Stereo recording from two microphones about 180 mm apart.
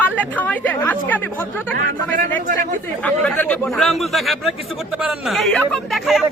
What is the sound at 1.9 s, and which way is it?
Speech, 50° right (ahead or behind).